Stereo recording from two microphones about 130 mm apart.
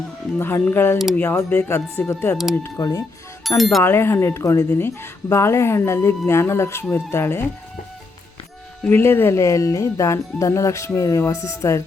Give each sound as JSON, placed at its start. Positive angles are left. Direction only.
{"t": 0.3, "sound": "a woman's voice", "side_deg": 15}
{"t": 3.6, "sound": "speech", "side_deg": 0}
{"t": 3.8, "sound": "a woman's voice", "side_deg": 20}
{"t": 8.9, "sound": "a woman's voice", "side_deg": 15}